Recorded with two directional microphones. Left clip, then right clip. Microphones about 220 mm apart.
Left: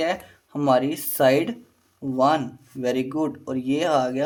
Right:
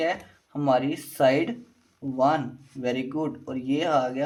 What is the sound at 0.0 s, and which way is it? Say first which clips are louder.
Speech: left 2 dB; 35° left (ahead or behind).